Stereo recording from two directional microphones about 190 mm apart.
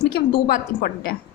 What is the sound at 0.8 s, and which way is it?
Speech, 50° left (ahead or behind).